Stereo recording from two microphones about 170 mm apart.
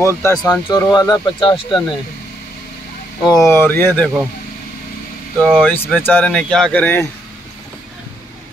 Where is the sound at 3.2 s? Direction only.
20° left (ahead or behind).